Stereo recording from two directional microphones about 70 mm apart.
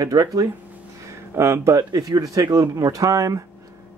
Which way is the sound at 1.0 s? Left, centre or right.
Right.